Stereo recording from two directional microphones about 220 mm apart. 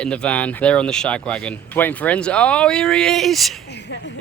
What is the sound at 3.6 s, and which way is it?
Speech, 50° left (ahead or behind).